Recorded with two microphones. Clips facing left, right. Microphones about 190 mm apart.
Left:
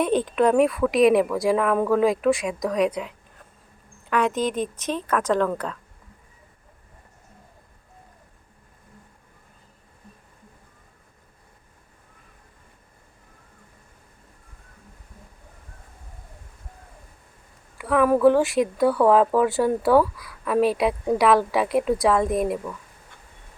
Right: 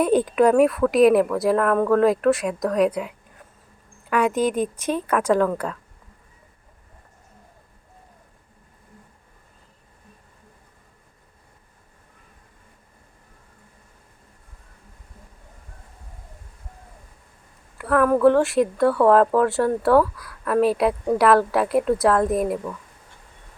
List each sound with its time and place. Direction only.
0.0 s a woman's voice: 10° right (ahead or behind)
17.7 s speech: centre (ahead or behind)